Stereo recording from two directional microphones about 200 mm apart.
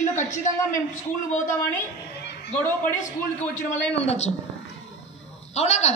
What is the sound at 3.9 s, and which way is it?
Speech, 30° left (ahead or behind).